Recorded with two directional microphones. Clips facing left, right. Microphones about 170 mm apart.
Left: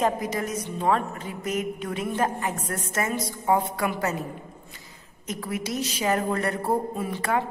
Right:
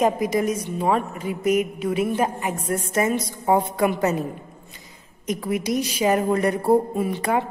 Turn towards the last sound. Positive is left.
turn(degrees=-15)  # may be behind; listen again after turning